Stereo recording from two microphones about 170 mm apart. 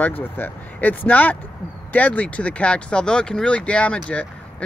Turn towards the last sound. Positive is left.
turn(degrees=5)  # may be behind; listen again after turning